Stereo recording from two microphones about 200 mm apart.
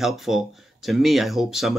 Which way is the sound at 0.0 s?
Centre (ahead or behind).